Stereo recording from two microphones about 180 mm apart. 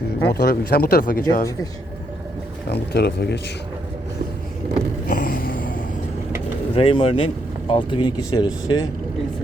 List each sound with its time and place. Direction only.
0.3 s speech: 60° left (ahead or behind)
2.6 s speech: 65° left (ahead or behind)
5.0 s a sound: 50° left (ahead or behind)
6.7 s speech: 30° left (ahead or behind)